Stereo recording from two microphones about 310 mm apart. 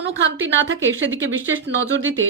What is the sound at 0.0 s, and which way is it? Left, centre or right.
Speech, right.